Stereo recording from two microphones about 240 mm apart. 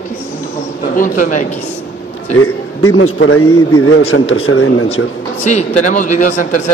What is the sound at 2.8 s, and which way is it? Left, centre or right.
A man's voice, left.